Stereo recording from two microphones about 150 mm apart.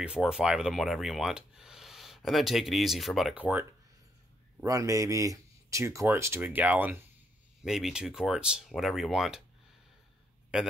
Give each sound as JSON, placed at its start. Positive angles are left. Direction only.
{"t": 0.0, "sound": "speech", "side_deg": -5}
{"t": 4.6, "sound": "speech", "side_deg": -20}